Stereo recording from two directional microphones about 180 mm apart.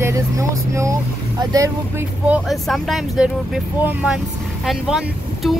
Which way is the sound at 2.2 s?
5° right (ahead or behind).